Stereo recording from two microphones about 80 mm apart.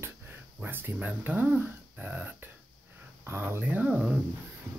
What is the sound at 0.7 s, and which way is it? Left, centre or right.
Speech, right.